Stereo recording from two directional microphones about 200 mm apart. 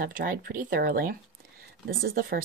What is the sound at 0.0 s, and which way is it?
Speech, 45° right (ahead or behind).